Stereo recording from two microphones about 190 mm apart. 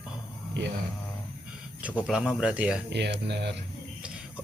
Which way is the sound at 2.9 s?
60° right (ahead or behind).